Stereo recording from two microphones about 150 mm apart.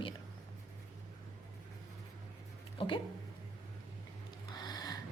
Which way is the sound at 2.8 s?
35° left (ahead or behind).